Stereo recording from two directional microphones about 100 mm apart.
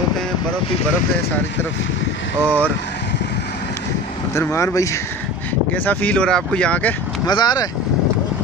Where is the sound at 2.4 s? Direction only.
15° left (ahead or behind).